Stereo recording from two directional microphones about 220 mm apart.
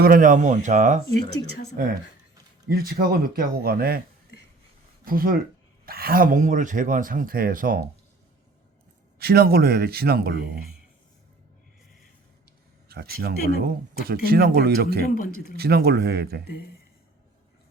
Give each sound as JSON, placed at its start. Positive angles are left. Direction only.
{"t": 0.0, "sound": "speech", "side_deg": -40}
{"t": 2.6, "sound": "speech", "side_deg": -45}
{"t": 5.0, "sound": "speech", "side_deg": -40}
{"t": 9.1, "sound": "speech", "side_deg": -45}
{"t": 12.9, "sound": "speech", "side_deg": -45}
{"t": 15.1, "sound": "speech", "side_deg": 40}
{"t": 15.5, "sound": "speech", "side_deg": -45}